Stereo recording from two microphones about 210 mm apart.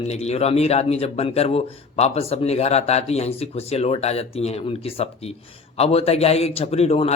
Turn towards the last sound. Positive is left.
turn(degrees=30)  # may be behind; listen again after turning